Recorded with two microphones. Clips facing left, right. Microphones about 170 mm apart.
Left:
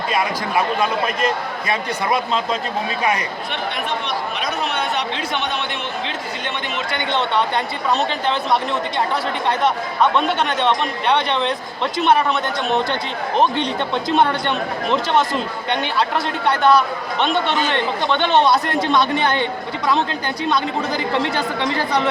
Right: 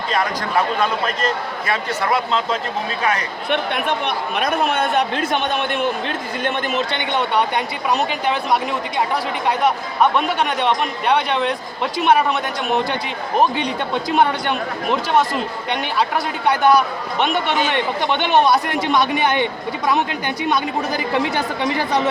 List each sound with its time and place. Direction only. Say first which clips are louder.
0.1 s a man's voice: right 1 dB; 10° left (ahead or behind)
3.5 s speech: right 6 dB; 55° right (ahead or behind)
6.9 s a man's voice: left 3 dB; 15° right (ahead or behind)
10.0 s a man's voice: even; 10° right (ahead or behind)